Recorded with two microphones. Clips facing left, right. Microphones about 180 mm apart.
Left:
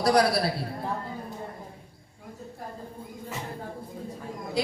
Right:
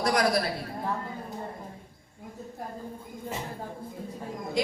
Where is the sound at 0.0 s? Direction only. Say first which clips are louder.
Left 4 dB; 35° left (ahead or behind).